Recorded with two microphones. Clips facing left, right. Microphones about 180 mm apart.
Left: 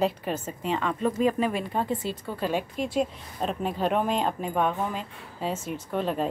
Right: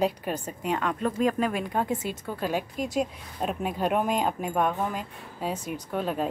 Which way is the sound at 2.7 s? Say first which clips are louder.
Left 1 dB; 45° right (ahead or behind).